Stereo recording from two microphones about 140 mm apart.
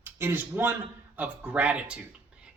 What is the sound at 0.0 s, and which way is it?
Speech, 15° right (ahead or behind).